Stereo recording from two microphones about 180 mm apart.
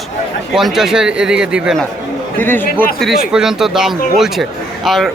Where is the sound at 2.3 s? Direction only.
10° left (ahead or behind).